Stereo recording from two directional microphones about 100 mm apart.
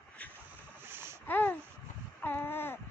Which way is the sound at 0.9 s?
25° right (ahead or behind).